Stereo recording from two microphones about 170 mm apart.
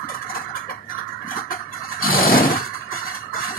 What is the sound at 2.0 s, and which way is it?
Vehicle, 60° left (ahead or behind).